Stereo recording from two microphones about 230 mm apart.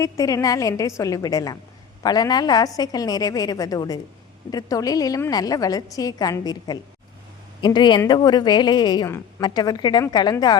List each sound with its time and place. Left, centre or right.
0.0 s a woman's voice: centre